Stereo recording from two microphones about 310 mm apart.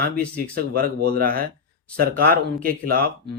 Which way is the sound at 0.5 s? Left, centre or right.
Right.